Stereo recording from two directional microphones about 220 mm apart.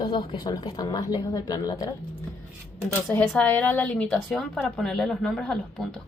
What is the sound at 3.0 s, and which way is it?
Speech, 5° left (ahead or behind).